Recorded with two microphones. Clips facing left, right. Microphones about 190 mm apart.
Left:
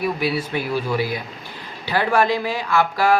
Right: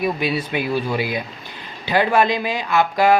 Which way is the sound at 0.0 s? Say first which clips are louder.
Right 1 dB; 20° right (ahead or behind).